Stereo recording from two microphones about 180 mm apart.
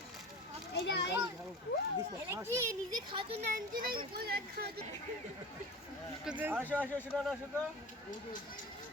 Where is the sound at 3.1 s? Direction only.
30° right (ahead or behind).